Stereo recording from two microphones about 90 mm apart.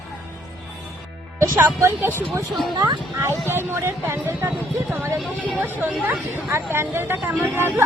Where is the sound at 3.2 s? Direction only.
25° right (ahead or behind).